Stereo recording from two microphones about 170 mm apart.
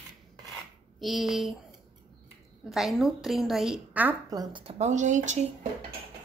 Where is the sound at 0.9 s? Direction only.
Centre (ahead or behind).